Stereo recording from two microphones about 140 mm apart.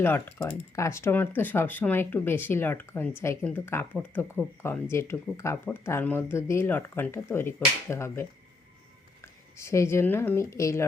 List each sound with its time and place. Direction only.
0.0 s speech: 15° left (ahead or behind)